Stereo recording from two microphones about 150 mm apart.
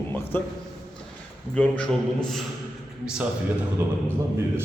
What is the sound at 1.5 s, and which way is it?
Speech, 10° left (ahead or behind).